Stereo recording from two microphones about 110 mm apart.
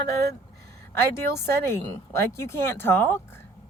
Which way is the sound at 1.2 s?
25° left (ahead or behind).